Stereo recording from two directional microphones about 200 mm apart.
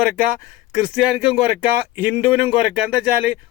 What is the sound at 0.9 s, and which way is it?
Speech, 5° right (ahead or behind).